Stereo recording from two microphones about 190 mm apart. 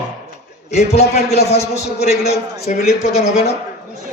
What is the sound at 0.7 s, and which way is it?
A man's voice, 35° left (ahead or behind).